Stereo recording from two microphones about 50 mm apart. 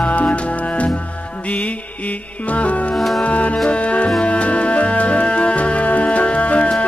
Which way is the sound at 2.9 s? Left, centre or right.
Centre.